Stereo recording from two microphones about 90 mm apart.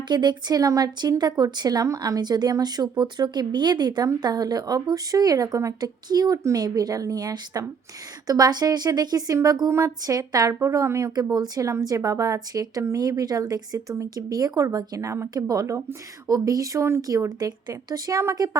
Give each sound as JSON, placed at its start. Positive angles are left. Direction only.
{"t": 0.1, "sound": "speech", "side_deg": -55}
{"t": 11.1, "sound": "speech", "side_deg": -45}
{"t": 17.0, "sound": "speech", "side_deg": -40}